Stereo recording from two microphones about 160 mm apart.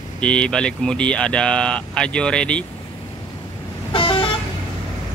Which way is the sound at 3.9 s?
30° left (ahead or behind).